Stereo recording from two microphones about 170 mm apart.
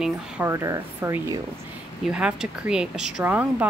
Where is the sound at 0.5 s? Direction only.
20° right (ahead or behind).